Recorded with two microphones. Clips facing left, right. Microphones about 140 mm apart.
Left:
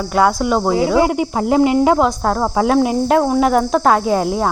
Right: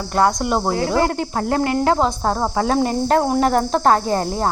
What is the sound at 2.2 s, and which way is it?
Speech, 5° right (ahead or behind).